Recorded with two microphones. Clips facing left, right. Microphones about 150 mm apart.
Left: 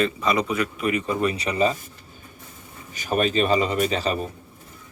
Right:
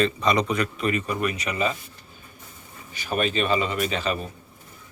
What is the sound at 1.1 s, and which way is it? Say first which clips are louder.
Speech: left 3 dB; 30° left (ahead or behind).